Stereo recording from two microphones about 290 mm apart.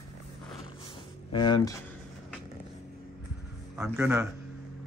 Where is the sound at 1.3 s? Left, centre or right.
Centre.